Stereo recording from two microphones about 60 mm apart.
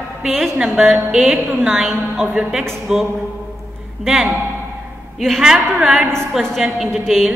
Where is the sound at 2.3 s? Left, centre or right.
Centre.